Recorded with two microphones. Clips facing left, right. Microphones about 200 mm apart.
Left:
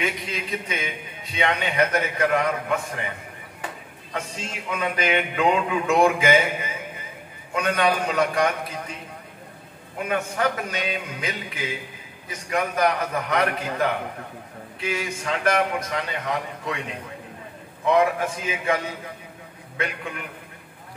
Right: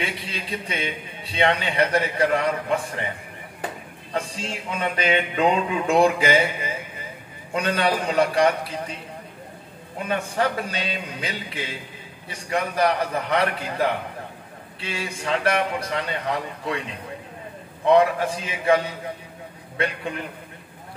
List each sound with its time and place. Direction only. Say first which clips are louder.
0.0 s a man's voice: left 2 dB; 35° right (ahead or behind)
4.1 s a man's voice: right 3 dB; 35° right (ahead or behind)
10.0 s a man's voice: even; 30° right (ahead or behind)
17.9 s a man's voice: right 3 dB; 35° right (ahead or behind)